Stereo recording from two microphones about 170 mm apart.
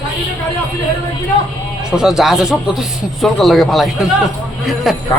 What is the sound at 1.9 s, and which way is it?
A man's voice, 5° right (ahead or behind).